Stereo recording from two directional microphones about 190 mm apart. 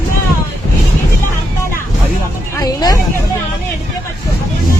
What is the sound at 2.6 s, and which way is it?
Speech, 20° left (ahead or behind).